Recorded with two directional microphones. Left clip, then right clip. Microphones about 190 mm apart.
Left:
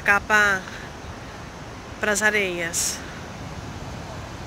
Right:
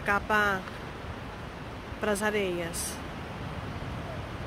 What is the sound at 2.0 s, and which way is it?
Speech, 5° right (ahead or behind).